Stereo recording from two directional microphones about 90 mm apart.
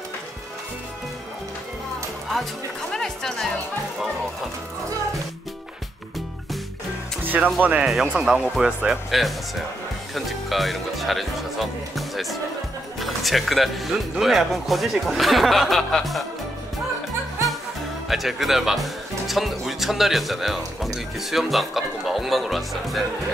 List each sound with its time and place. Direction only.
2.9 s speech: 5° left (ahead or behind)
7.2 s speech: 20° right (ahead or behind)
7.8 s speech: 5° right (ahead or behind)
18.0 s speech: centre (ahead or behind)